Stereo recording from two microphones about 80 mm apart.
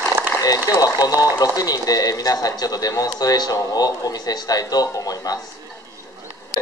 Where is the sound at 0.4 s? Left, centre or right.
Left.